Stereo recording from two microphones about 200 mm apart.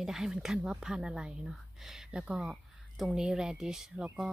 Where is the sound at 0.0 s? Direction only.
Centre (ahead or behind).